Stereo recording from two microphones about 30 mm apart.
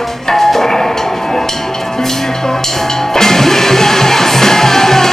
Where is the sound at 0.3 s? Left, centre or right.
Centre.